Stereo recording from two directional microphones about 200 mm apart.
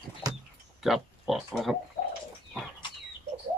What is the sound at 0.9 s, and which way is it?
Speech, centre (ahead or behind).